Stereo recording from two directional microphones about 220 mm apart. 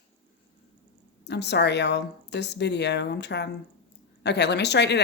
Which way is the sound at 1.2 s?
50° left (ahead or behind).